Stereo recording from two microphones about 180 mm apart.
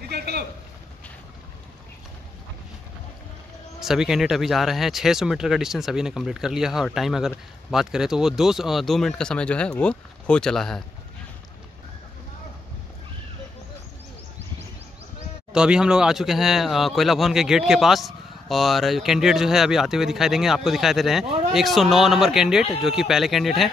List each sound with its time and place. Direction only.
0.1 s a sound: 65° right (ahead or behind)
3.8 s speech: 5° right (ahead or behind)
15.5 s speech: 5° right (ahead or behind)